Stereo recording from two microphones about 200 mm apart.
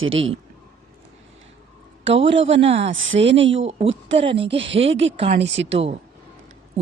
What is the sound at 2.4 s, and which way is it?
Speech, 30° right (ahead or behind).